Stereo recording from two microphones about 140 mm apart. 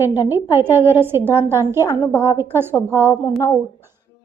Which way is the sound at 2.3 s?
15° right (ahead or behind).